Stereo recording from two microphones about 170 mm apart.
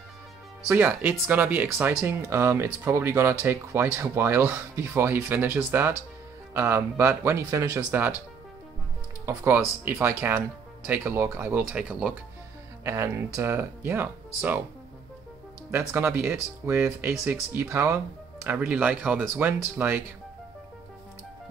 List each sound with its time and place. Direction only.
0.7 s speech: 10° right (ahead or behind)
9.2 s speech: 15° right (ahead or behind)
15.9 s speech: 15° right (ahead or behind)
17.1 s speech: centre (ahead or behind)
17.6 s speech: 15° right (ahead or behind)